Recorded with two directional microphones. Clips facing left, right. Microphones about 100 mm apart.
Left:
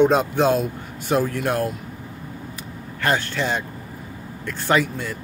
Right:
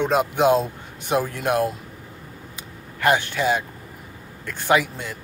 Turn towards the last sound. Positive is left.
turn(degrees=-15)  # may be behind; listen again after turning